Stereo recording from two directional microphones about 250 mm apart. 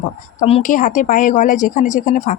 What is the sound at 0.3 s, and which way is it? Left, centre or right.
Speech, left.